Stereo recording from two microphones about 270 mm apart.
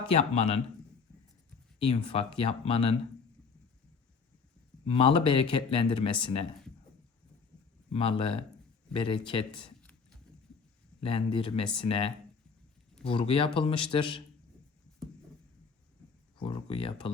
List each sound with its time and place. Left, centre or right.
0.1 s speech: left
1.9 s speech: left
4.9 s speech: left
7.9 s speech: centre
11.0 s speech: centre
16.4 s speech: centre